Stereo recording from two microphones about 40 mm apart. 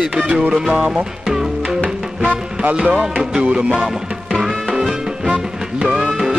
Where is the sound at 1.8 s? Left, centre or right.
Right.